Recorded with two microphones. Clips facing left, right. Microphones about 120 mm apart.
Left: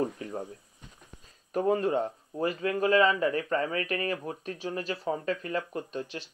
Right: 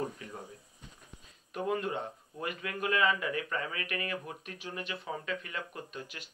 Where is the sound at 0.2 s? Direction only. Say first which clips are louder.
Left 8 dB; 35° left (ahead or behind).